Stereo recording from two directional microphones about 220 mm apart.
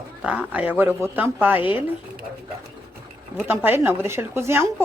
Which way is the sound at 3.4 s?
10° right (ahead or behind).